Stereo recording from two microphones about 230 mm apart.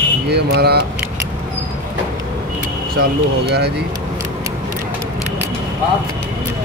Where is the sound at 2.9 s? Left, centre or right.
Right.